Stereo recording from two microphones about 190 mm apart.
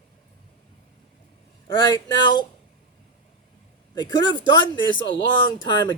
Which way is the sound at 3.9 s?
20° left (ahead or behind).